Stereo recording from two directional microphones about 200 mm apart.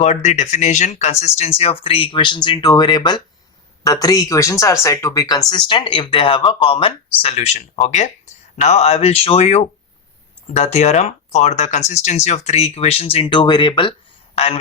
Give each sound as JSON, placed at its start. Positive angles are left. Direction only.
{"t": 0.0, "sound": "speech", "side_deg": 35}